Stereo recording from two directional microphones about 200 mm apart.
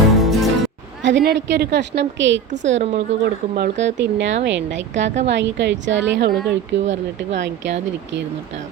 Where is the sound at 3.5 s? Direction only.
55° right (ahead or behind).